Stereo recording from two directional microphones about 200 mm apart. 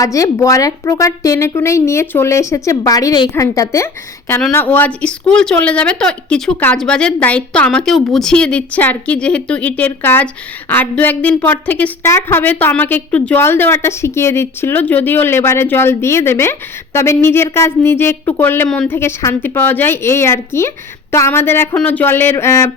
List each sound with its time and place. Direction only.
0.0 s a woman's voice: 15° left (ahead or behind)